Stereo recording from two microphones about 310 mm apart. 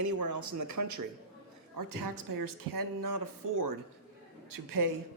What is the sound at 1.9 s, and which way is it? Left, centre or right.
Speech, right.